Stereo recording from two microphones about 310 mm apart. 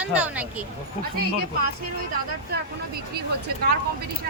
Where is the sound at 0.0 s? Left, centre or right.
Centre.